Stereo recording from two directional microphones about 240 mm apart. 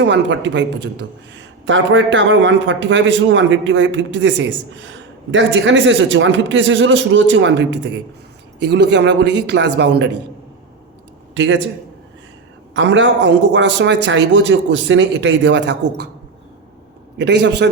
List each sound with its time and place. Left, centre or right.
0.0 s a man's voice: right
11.3 s a man's voice: right
12.7 s a man's voice: right
17.2 s a man's voice: right